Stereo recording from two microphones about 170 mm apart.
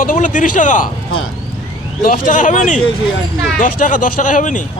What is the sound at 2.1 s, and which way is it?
Speech, 50° left (ahead or behind).